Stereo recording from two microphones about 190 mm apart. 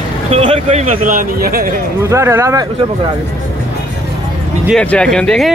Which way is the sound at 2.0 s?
15° right (ahead or behind).